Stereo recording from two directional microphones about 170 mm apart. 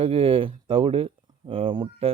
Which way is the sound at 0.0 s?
35° right (ahead or behind).